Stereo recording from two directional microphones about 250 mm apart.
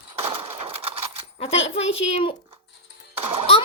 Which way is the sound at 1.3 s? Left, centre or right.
Left.